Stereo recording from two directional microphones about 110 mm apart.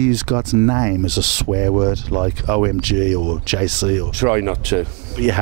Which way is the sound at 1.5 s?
30° right (ahead or behind).